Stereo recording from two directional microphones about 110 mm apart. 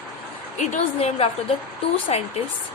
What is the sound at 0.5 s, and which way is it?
A woman's voice, 80° left.